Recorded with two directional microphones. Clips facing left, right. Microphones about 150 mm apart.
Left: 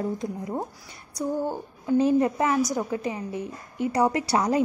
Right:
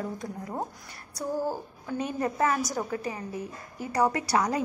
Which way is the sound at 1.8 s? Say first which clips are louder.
Left 10 dB; 25° left (ahead or behind).